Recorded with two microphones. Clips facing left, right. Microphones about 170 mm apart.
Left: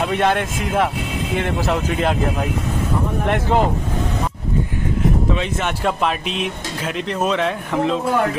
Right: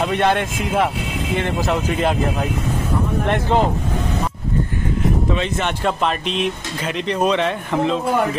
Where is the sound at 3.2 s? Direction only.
5° left (ahead or behind).